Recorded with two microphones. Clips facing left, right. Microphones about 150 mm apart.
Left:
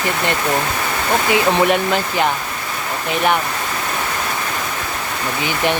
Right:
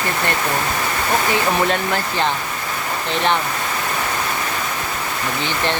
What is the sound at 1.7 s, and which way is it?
Speech, 15° left (ahead or behind).